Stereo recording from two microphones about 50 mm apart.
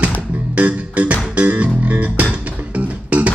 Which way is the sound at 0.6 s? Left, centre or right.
Right.